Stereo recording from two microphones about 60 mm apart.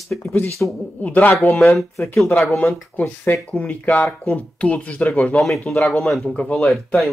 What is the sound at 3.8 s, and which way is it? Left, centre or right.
Speech, left.